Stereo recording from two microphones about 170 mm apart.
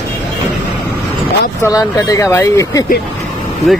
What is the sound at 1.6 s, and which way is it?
Speech, 20° left (ahead or behind).